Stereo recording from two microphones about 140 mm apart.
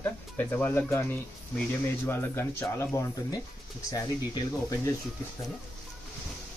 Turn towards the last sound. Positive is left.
turn(degrees=25)  # may be behind; listen again after turning